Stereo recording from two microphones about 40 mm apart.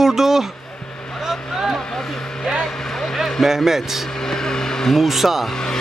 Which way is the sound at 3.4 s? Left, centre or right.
Centre.